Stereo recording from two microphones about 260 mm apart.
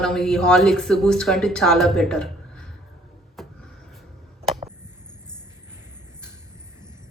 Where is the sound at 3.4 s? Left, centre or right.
Centre.